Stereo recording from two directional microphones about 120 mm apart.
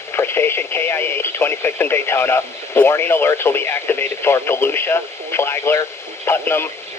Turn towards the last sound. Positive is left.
turn(degrees=20)  # may be behind; listen again after turning